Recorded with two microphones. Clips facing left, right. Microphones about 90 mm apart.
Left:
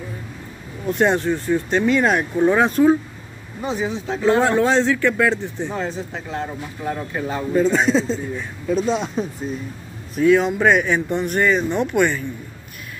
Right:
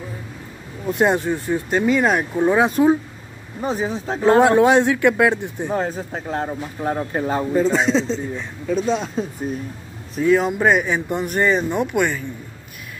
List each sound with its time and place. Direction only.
0.8 s speech: 5° right (ahead or behind)
3.6 s speech: 40° right (ahead or behind)
4.6 s speech: 15° right (ahead or behind)
5.7 s speech: 45° right (ahead or behind)
7.5 s a man's voice: centre (ahead or behind)
10.2 s speech: 10° right (ahead or behind)